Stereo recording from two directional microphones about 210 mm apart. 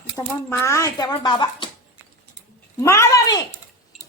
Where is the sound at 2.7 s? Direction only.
15° left (ahead or behind).